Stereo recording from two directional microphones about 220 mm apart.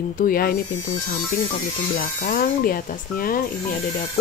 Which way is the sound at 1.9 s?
40° left (ahead or behind).